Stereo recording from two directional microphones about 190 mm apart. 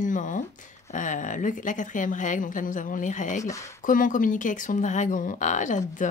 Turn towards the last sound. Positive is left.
turn(degrees=45)  # may be behind; listen again after turning